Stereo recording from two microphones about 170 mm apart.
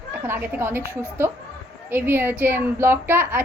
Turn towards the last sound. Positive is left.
turn(degrees=-10)  # may be behind; listen again after turning